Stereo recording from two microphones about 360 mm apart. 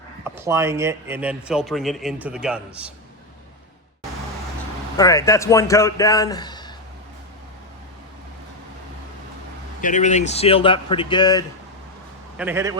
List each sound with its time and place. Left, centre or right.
0.3 s a man's voice: centre
4.9 s a man's voice: centre
9.8 s a man's voice: centre
12.4 s a man's voice: centre